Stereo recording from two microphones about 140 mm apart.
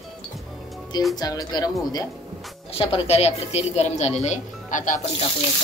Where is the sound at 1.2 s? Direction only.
25° left (ahead or behind).